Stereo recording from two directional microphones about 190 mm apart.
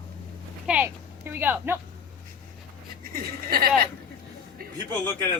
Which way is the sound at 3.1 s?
55° right (ahead or behind).